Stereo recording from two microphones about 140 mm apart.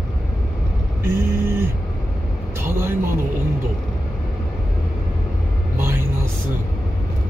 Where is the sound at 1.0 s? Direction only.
20° right (ahead or behind).